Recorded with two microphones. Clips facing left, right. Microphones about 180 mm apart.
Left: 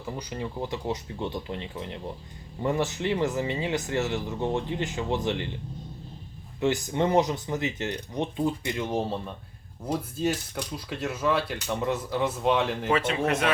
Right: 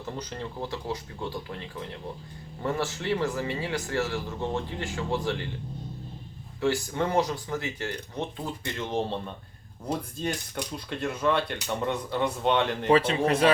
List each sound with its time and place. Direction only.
0.0 s speech: 10° left (ahead or behind)
6.6 s speech: 20° left (ahead or behind); by 12.9 s centre (ahead or behind)
12.9 s a man's voice: 30° right (ahead or behind)